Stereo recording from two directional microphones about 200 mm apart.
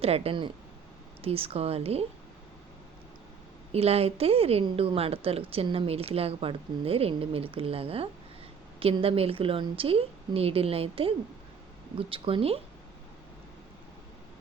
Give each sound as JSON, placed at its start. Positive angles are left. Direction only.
{"t": 0.0, "sound": "speech", "side_deg": -30}
{"t": 3.7, "sound": "speech", "side_deg": -30}